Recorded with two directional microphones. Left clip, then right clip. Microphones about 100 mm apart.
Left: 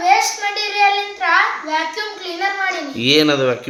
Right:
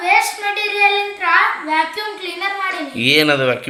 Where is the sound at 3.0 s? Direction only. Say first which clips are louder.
Right 1 dB; 15° left (ahead or behind).